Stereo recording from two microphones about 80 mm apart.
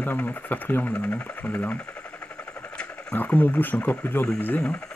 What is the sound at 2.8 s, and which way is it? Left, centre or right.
Speech, centre.